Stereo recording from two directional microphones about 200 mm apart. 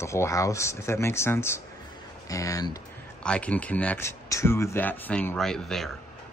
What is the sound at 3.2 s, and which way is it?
Speech, 5° left (ahead or behind).